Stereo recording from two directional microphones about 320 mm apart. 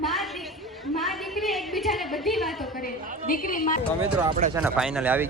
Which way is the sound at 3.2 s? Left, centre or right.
Left.